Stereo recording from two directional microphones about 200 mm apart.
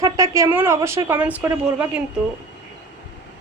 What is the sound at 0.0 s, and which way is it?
Speech, 15° right (ahead or behind).